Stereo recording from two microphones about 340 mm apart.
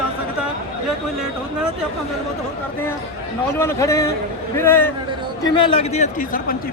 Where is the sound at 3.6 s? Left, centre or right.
Centre; by 6.5 s left.